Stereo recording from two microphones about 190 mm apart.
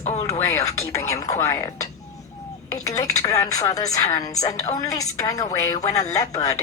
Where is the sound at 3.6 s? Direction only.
20° left (ahead or behind).